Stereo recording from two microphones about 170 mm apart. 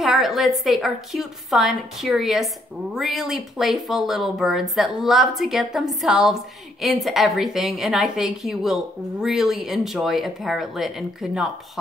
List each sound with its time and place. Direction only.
0.0 s a woman's voice: centre (ahead or behind)